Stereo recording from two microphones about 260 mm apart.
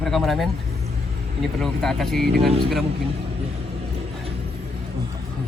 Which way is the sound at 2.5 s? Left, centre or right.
Right.